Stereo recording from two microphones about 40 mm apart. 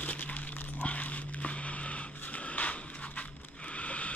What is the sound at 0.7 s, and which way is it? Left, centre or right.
Dog, left.